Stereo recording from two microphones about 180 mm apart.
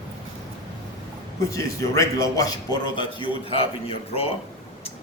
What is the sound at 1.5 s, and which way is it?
A man's voice, 15° left (ahead or behind).